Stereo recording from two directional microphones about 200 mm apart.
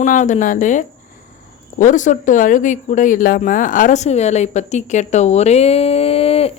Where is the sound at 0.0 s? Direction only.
40° left (ahead or behind).